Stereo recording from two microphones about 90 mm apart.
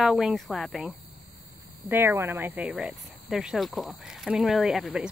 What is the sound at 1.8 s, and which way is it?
Speech, 20° right (ahead or behind).